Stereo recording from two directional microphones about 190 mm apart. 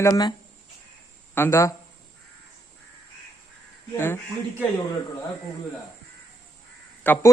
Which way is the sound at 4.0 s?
10° left (ahead or behind).